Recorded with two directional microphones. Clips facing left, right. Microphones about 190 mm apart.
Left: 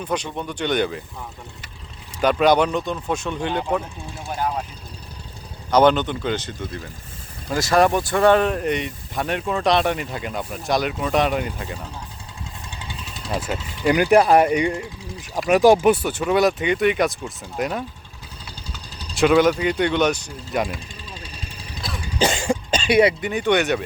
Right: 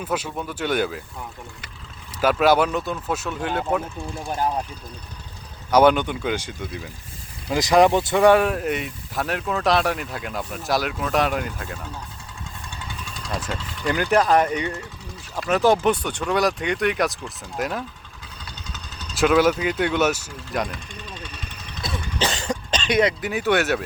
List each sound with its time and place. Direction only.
0.0 s speech: 5° right (ahead or behind)
2.2 s speech: 5° right (ahead or behind)
5.7 s speech: 10° right (ahead or behind)
12.7 s vehicle: 25° left (ahead or behind)
13.2 s speech: 5° left (ahead or behind)
19.1 s speech: centre (ahead or behind)
21.2 s vehicle: 30° left (ahead or behind)
22.2 s cough: 10° left (ahead or behind)
23.2 s speech: 5° right (ahead or behind)